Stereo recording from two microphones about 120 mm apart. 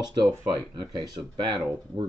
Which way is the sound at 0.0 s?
35° right (ahead or behind).